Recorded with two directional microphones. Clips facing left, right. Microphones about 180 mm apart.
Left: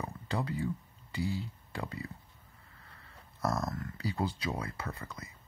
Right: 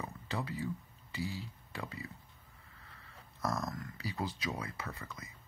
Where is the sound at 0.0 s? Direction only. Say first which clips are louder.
Left 4 dB; 30° left (ahead or behind).